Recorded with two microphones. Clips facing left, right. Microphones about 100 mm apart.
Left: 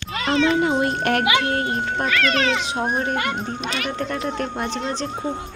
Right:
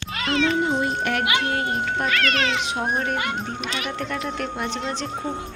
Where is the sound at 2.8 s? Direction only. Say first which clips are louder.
Left 2 dB; centre (ahead or behind).